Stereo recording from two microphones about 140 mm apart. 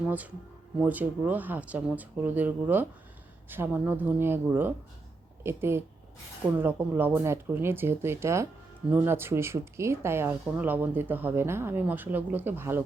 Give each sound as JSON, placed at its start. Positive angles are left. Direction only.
{"t": 0.8, "sound": "speech", "side_deg": -10}